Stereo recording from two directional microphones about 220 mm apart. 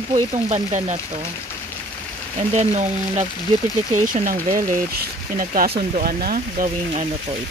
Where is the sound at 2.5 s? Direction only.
30° right (ahead or behind).